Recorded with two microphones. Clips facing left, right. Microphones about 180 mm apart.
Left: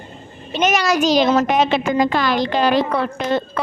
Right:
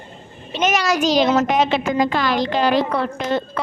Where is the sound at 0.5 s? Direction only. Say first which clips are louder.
Left 2 dB; 45° left (ahead or behind).